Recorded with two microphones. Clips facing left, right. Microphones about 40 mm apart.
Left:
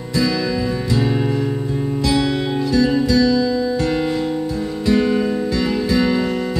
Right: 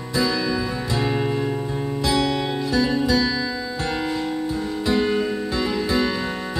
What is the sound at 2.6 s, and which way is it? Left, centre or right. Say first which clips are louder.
Music: left 4 dB; centre.